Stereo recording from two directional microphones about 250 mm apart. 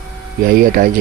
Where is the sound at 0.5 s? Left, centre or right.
Right.